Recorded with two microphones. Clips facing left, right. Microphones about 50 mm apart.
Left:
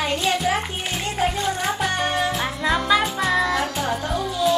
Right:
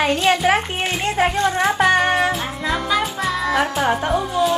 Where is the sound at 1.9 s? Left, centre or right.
Right.